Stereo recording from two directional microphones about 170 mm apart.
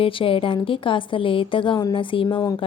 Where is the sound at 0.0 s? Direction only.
30° left (ahead or behind).